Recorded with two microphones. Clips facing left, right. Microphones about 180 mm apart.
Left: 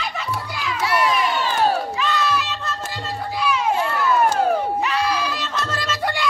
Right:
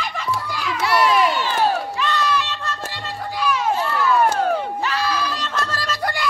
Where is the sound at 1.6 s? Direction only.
5° left (ahead or behind).